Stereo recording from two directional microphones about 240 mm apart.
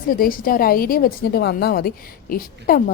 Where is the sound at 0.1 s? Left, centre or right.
Left.